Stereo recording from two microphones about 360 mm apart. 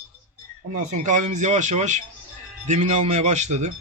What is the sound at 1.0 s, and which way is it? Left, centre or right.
A man's voice, centre.